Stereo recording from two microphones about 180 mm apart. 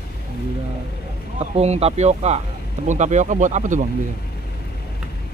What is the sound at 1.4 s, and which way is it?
Speech, 35° right (ahead or behind).